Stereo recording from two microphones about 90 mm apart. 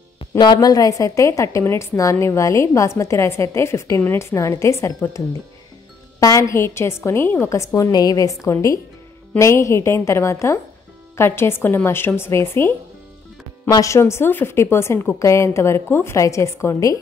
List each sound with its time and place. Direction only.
0.4 s a woman's voice: 50° left (ahead or behind)